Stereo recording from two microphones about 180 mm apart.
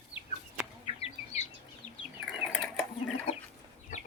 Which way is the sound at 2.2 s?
Centre (ahead or behind).